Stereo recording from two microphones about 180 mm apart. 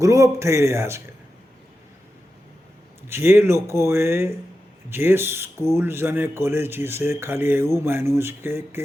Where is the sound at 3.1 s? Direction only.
15° right (ahead or behind).